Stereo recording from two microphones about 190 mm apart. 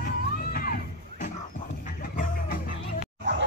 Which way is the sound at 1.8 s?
45° left (ahead or behind).